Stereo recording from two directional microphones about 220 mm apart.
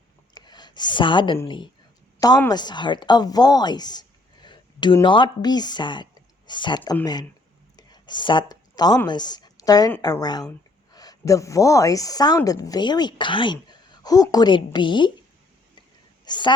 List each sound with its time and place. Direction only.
0.3 s a woman's voice: 20° left (ahead or behind)
16.2 s a woman's voice: 20° left (ahead or behind)